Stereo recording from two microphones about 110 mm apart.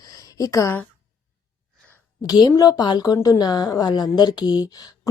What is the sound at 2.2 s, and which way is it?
A woman's voice, 35° left (ahead or behind).